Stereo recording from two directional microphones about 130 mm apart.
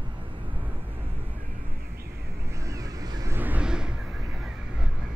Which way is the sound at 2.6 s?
25° right (ahead or behind).